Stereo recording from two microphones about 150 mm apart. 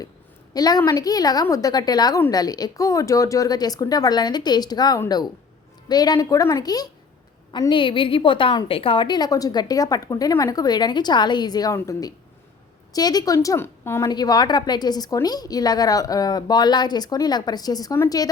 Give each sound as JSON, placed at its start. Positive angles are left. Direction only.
{"t": 0.5, "sound": "a woman's voice", "side_deg": 25}
{"t": 14.1, "sound": "a woman's voice", "side_deg": 25}